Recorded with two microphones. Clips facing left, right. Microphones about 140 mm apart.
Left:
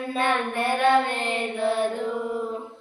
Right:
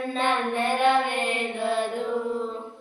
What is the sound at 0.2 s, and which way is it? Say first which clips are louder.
Child singing: left 1 dB; 15° right (ahead or behind).